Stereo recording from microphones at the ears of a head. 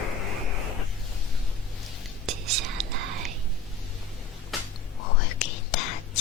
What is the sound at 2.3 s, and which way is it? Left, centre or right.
Whispering, right.